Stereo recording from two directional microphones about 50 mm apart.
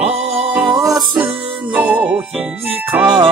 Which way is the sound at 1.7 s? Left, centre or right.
Right.